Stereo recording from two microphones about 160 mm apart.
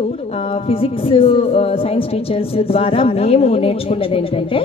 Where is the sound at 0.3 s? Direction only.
35° left (ahead or behind).